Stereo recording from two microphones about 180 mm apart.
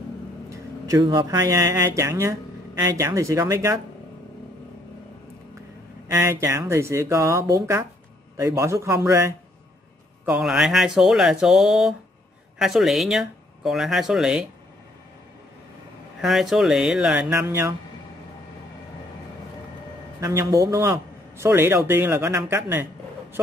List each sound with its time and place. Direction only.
0.5 s a man's voice: 20° right (ahead or behind)
6.0 s a man's voice: 15° right (ahead or behind)
10.2 s speech: 5° right (ahead or behind)
16.2 s speech: centre (ahead or behind)
20.2 s a man's voice: 15° right (ahead or behind)